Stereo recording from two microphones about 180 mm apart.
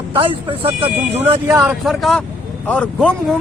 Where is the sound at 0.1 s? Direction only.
30° right (ahead or behind).